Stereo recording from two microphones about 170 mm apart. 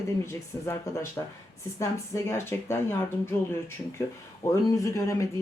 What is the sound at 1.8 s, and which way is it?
Speech, 15° left (ahead or behind).